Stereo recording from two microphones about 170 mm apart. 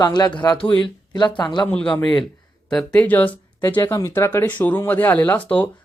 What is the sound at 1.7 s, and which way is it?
Speech, 5° left (ahead or behind).